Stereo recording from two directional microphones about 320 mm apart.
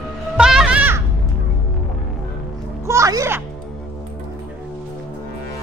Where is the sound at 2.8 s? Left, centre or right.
Centre.